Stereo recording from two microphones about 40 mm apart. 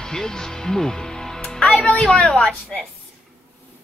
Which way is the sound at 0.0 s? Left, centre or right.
Centre.